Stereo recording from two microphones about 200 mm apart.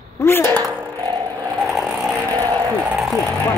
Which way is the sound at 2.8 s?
Centre (ahead or behind).